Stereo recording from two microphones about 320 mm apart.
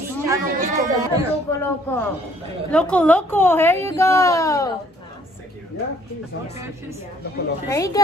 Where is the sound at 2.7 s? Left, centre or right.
Centre.